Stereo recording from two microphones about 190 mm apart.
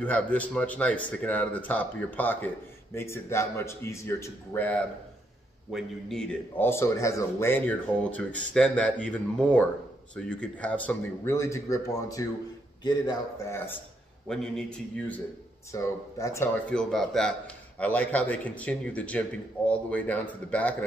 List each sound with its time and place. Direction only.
0.0 s a man's voice: 10° left (ahead or behind)
5.7 s a man's voice: centre (ahead or behind)
14.2 s a man's voice: 5° left (ahead or behind)
16.7 s a man's voice: centre (ahead or behind)